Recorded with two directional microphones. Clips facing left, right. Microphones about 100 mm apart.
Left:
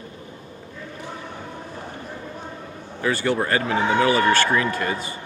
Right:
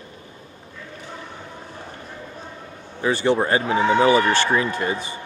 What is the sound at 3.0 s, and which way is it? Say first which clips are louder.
Speech: right 3 dB; 20° right (ahead or behind).